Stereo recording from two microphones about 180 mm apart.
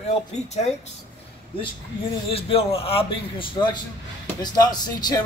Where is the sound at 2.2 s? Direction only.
30° left (ahead or behind).